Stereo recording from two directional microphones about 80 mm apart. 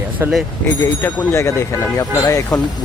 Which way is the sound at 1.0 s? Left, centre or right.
Left.